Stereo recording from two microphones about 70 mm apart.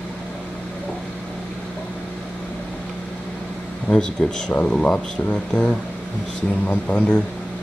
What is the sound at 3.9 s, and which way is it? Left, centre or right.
Speech, centre.